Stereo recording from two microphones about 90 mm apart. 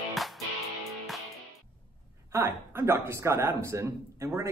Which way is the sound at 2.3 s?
30° right (ahead or behind).